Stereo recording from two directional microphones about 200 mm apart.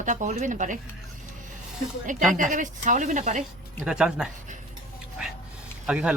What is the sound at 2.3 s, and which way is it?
A woman's voice, 40° right (ahead or behind).